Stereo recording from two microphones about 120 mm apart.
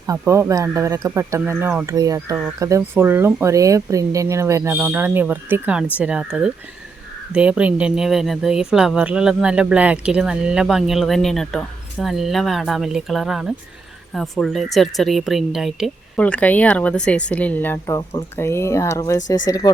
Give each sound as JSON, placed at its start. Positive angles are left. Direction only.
{"t": 0.0, "sound": "speech", "side_deg": -25}
{"t": 16.1, "sound": "speech", "side_deg": 10}